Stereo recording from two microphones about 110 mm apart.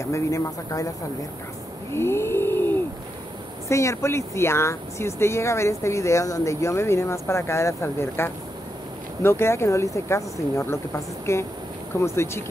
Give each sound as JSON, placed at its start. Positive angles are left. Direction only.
{"t": 0.0, "sound": "speech", "side_deg": 25}
{"t": 1.9, "sound": "a sound", "side_deg": 25}
{"t": 3.6, "sound": "speech", "side_deg": 25}